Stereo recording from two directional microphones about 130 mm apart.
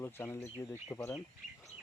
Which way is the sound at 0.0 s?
20° left (ahead or behind).